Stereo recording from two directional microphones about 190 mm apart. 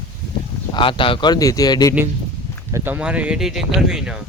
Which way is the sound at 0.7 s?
25° left (ahead or behind).